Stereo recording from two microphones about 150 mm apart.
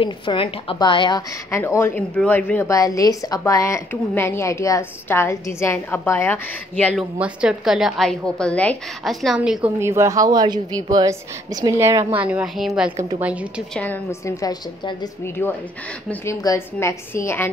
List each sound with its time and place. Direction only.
0.0 s a woman's voice: 35° left (ahead or behind)
1.5 s a woman's voice: 20° left (ahead or behind)
7.0 s a woman's voice: 5° right (ahead or behind)
9.8 s a woman's voice: 15° right (ahead or behind)
12.1 s speech: 10° right (ahead or behind)
14.2 s a woman's voice: 25° left (ahead or behind)